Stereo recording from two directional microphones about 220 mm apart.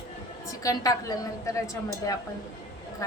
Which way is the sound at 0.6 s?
15° left (ahead or behind).